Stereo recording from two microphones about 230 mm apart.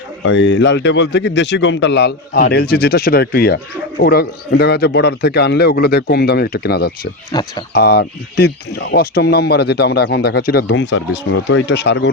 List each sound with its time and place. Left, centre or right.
0.3 s speech: left
7.3 s speech: centre
7.7 s speech: left